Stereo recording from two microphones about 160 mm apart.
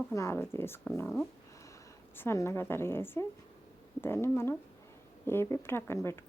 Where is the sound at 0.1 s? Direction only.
15° left (ahead or behind).